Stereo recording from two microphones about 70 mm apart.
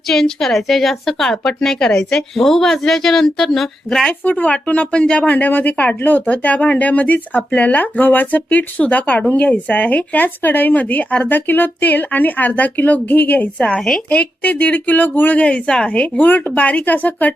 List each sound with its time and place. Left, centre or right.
0.1 s a woman's voice: centre
4.2 s speech: left